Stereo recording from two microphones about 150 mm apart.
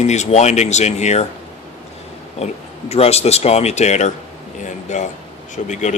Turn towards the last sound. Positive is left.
turn(degrees=55)  # may be behind; listen again after turning